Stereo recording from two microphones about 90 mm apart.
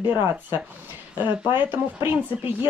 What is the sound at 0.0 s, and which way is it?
Speech, 25° right (ahead or behind).